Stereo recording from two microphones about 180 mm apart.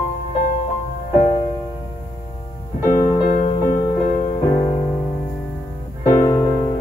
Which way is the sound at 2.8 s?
15° left (ahead or behind).